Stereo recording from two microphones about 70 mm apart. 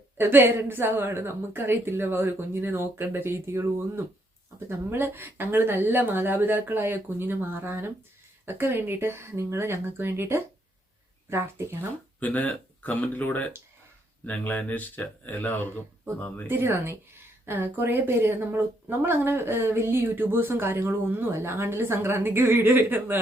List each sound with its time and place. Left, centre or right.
0.2 s a woman's voice: right
12.2 s speech: centre
16.5 s a woman's voice: right